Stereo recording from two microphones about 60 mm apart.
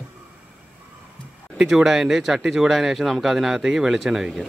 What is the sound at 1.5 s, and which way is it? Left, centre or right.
Speech, centre.